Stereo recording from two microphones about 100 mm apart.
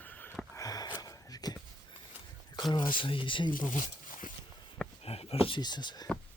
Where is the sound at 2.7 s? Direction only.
55° left (ahead or behind).